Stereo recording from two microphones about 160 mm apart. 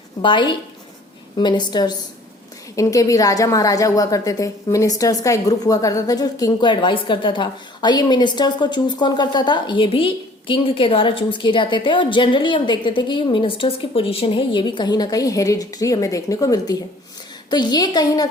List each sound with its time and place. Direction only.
0.2 s a woman's voice: 30° left (ahead or behind)